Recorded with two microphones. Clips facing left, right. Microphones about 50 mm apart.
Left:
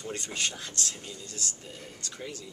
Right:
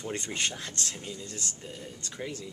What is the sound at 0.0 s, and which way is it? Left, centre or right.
Speech, right.